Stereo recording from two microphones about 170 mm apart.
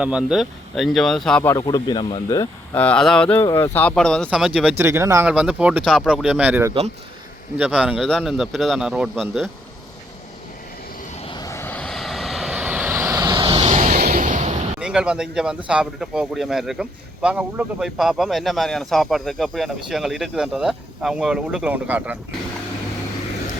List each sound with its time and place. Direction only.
0.0 s speech: 5° right (ahead or behind)
1.5 s speech: 25° left (ahead or behind)
2.7 s a sound: 5° left (ahead or behind)
3.8 s speech: 5° left (ahead or behind); by 5.3 s 15° right (ahead or behind)
5.3 s speech: 5° right (ahead or behind)
11.1 s vehicle: 35° left (ahead or behind)
11.3 s vehicle: 20° left (ahead or behind); by 13.6 s 25° right (ahead or behind)
13.6 s vehicle: 45° right (ahead or behind)
14.0 s a sound: 55° right (ahead or behind)
14.8 s speech: 5° right (ahead or behind)